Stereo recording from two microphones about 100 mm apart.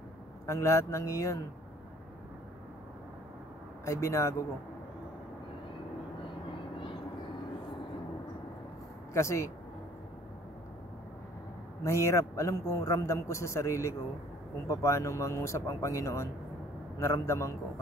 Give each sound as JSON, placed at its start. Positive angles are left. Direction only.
{"t": 0.5, "sound": "a man's voice", "side_deg": 30}
{"t": 3.8, "sound": "a man's voice", "side_deg": 30}
{"t": 9.1, "sound": "a man's voice", "side_deg": 30}
{"t": 11.8, "sound": "a man's voice", "side_deg": 30}